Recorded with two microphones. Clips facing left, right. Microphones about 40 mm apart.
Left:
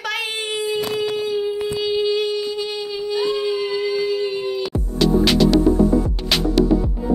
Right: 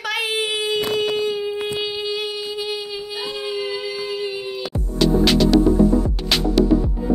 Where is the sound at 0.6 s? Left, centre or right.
Right.